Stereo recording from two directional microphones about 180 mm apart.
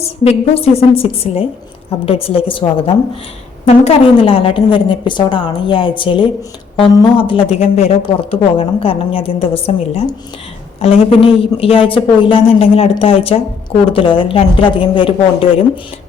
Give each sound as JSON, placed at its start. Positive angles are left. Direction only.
{"t": 0.0, "sound": "a woman's voice", "side_deg": 35}